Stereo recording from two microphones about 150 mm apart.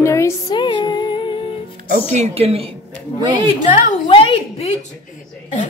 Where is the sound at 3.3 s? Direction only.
30° right (ahead or behind).